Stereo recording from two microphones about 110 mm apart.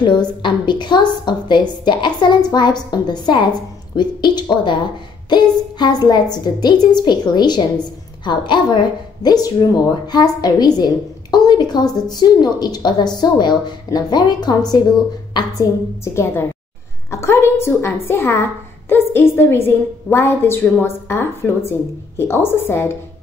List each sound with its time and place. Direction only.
0.0 s a woman's voice: 45° left (ahead or behind)
16.0 s a woman's voice: 25° left (ahead or behind)